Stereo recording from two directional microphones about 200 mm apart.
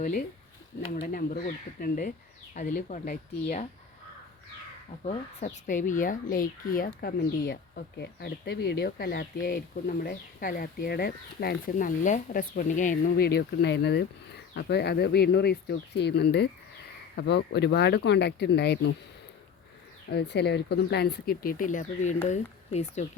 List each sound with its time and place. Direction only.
0.0 s speech: 45° left (ahead or behind)
5.0 s speech: 35° left (ahead or behind); by 18.9 s 55° left (ahead or behind)
20.1 s speech: 55° left (ahead or behind); by 23.0 s 35° left (ahead or behind)